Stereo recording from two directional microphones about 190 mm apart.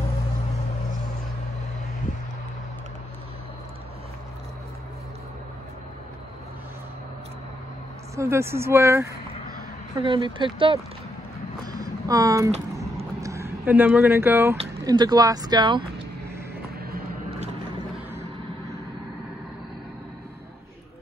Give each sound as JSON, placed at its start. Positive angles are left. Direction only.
{"t": 8.2, "sound": "speech", "side_deg": -15}
{"t": 9.9, "sound": "speech", "side_deg": -25}
{"t": 11.7, "sound": "a sound", "side_deg": -20}
{"t": 13.2, "sound": "speech", "side_deg": -15}